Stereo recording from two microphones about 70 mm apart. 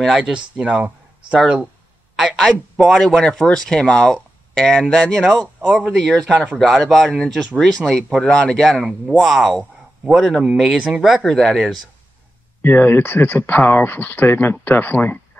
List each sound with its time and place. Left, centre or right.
0.2 s speech: centre
2.3 s speech: centre
3.0 s speech: centre
6.3 s speech: centre
6.8 s speech: centre
12.6 s speech: left